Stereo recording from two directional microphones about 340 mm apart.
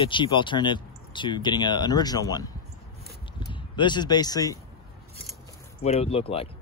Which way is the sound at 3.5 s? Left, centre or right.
Centre.